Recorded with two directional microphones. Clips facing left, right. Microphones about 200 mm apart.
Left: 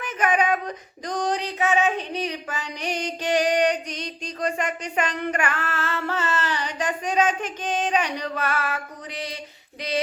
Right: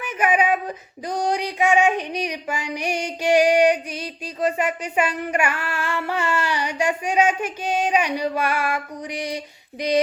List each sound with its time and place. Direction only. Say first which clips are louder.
0.0 s speech: right 2 dB; 10° right (ahead or behind)
1.0 s child singing: right 2 dB; 10° right (ahead or behind)